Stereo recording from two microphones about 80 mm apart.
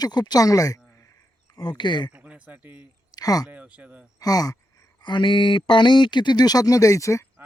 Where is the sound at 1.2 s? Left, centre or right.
Left.